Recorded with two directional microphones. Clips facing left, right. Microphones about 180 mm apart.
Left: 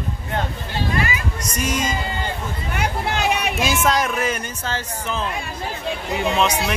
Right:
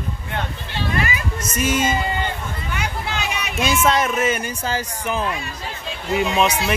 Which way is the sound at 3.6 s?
Centre (ahead or behind).